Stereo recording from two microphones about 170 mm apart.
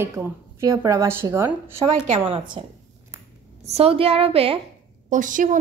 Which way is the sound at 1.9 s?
45° right (ahead or behind).